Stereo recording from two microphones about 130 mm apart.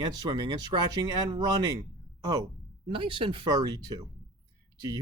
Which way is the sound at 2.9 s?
40° right (ahead or behind).